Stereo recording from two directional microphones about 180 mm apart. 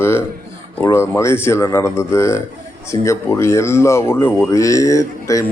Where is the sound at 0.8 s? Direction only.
15° left (ahead or behind).